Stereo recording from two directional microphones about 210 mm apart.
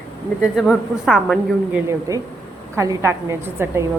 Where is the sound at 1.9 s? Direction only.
15° right (ahead or behind).